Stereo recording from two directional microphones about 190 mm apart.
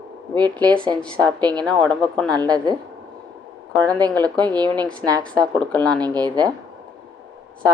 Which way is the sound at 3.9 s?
20° right (ahead or behind).